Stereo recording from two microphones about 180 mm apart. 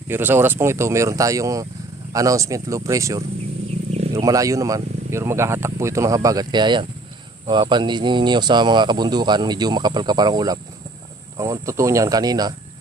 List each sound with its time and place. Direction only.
0.1 s speech: 10° right (ahead or behind)